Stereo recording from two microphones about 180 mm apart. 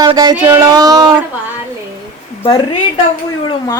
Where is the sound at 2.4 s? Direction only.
25° left (ahead or behind).